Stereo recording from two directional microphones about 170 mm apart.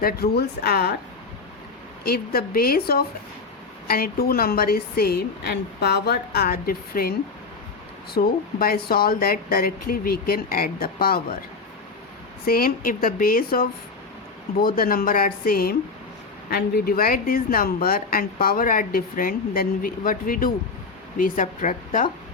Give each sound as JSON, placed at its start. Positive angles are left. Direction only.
{"t": 0.0, "sound": "speech", "side_deg": 70}
{"t": 2.0, "sound": "speech", "side_deg": 60}
{"t": 8.1, "sound": "speech", "side_deg": 60}
{"t": 12.5, "sound": "a woman's voice", "side_deg": 60}